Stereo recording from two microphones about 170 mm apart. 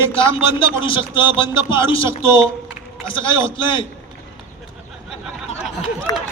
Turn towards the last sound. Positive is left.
turn(degrees=20)  # may be behind; listen again after turning